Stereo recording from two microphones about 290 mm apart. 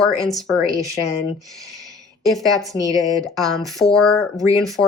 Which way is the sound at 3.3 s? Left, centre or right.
Centre.